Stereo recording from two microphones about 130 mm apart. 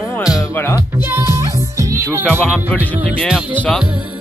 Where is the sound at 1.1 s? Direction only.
20° right (ahead or behind).